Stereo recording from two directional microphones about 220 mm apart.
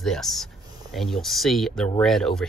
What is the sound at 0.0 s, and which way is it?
Speech, centre (ahead or behind).